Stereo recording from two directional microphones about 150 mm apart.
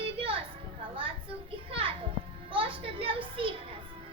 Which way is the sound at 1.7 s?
35° right (ahead or behind).